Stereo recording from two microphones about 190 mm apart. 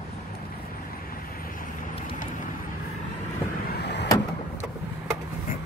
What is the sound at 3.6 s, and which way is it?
Vehicle, 60° left (ahead or behind).